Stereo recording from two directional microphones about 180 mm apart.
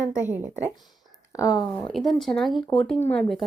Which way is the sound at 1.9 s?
Centre (ahead or behind).